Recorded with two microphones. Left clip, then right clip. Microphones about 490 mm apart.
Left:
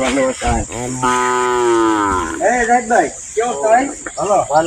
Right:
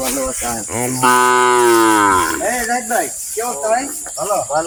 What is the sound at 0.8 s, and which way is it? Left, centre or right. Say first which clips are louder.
Cattle: right 6 dB; centre.